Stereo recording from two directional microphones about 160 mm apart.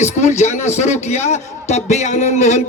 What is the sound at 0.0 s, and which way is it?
Speech, 45° left (ahead or behind).